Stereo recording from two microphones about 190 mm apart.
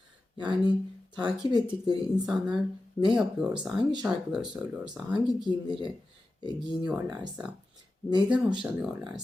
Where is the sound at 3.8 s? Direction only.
20° right (ahead or behind).